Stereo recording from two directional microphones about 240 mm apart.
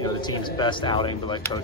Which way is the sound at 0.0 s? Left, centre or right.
Centre.